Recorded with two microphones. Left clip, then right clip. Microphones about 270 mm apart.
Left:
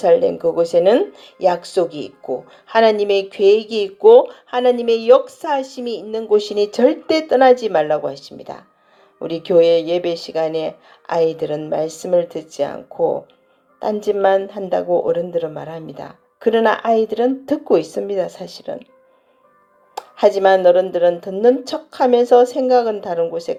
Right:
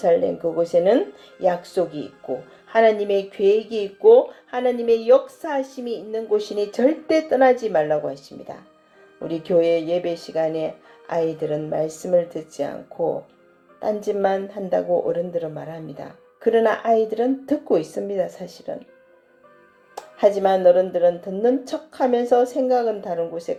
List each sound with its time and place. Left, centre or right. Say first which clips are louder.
0.0 s speech: left 5 dB; left
9.1 s speech: left 6 dB; left
20.1 s speech: left 5 dB; left